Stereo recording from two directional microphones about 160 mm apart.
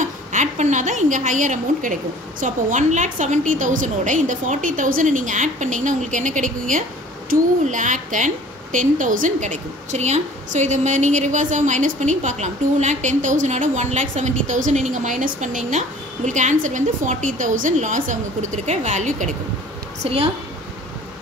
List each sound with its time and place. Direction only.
0.0 s a woman's voice: 50° right (ahead or behind)
20.0 s a woman's voice: 40° right (ahead or behind)